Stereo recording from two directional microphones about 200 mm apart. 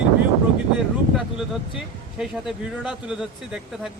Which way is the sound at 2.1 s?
5° right (ahead or behind).